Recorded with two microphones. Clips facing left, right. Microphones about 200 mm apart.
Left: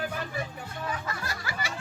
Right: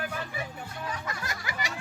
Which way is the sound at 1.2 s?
20° right (ahead or behind).